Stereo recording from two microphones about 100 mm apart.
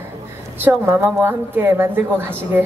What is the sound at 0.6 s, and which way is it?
A woman's voice, 20° right (ahead or behind).